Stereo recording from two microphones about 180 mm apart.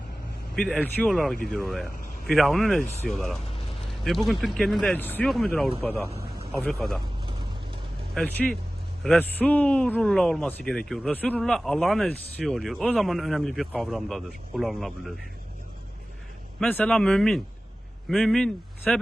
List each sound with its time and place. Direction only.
0.5 s a man's voice: 5° left (ahead or behind)
6.1 s a sound: 35° right (ahead or behind)
6.6 s a man's voice: centre (ahead or behind)
8.1 s a man's voice: 5° left (ahead or behind)
16.6 s a man's voice: 5° left (ahead or behind)